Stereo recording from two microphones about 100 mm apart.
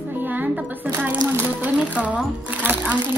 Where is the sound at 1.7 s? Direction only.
15° right (ahead or behind).